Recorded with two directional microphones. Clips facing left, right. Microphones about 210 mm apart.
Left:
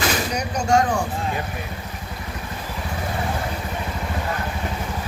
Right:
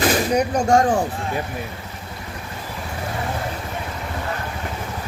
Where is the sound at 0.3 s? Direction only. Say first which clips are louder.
Right 2 dB; 50° right (ahead or behind).